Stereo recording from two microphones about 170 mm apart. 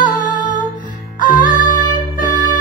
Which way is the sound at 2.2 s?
50° left (ahead or behind).